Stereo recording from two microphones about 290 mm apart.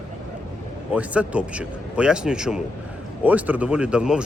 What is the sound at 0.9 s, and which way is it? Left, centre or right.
Speech, centre.